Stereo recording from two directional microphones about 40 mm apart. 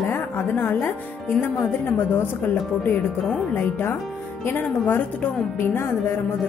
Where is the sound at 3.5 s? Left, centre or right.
Left.